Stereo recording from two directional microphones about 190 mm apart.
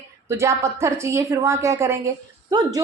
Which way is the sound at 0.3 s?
15° right (ahead or behind).